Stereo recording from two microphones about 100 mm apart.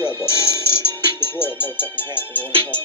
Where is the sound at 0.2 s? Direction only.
25° left (ahead or behind).